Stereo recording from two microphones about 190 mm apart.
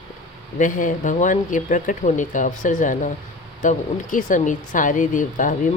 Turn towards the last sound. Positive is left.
turn(degrees=45)  # may be behind; listen again after turning